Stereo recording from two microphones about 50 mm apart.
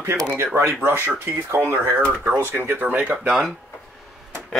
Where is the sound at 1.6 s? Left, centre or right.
Right.